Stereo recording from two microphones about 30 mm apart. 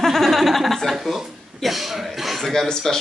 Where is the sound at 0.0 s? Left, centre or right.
Centre.